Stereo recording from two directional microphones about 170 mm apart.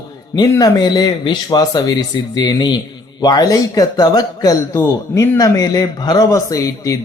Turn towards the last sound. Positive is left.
turn(degrees=20)  # may be behind; listen again after turning